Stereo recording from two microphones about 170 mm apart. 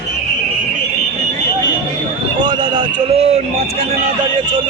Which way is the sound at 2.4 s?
25° right (ahead or behind).